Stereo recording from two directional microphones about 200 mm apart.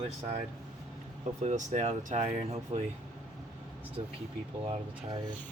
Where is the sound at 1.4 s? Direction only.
35° right (ahead or behind).